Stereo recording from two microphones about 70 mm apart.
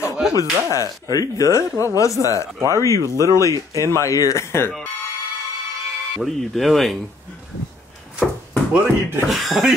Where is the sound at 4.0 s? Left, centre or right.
Left.